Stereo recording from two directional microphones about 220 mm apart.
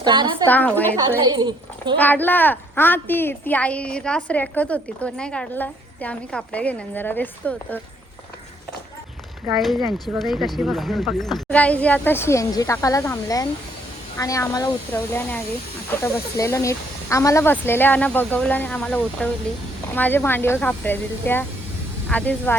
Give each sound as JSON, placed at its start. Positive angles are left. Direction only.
{"t": 0.0, "sound": "a woman's voice", "side_deg": -20}
{"t": 0.4, "sound": "speech", "side_deg": 10}
{"t": 1.2, "sound": "a child's voice", "side_deg": -20}
{"t": 2.0, "sound": "speech", "side_deg": 10}
{"t": 9.5, "sound": "speech", "side_deg": 0}